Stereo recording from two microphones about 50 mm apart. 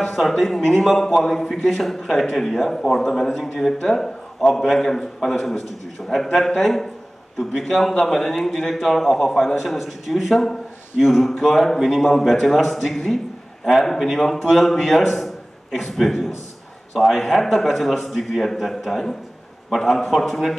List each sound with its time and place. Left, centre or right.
0.0 s a man's voice: centre